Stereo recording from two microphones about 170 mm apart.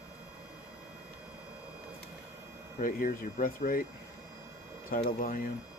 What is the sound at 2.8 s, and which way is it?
Speech, 55° left (ahead or behind).